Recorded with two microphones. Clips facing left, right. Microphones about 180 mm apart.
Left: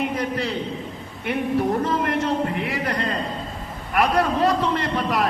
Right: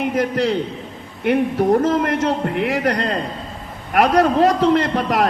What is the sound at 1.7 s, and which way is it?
A man's voice, 45° right (ahead or behind).